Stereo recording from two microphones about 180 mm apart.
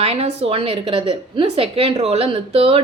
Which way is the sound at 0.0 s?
35° right (ahead or behind).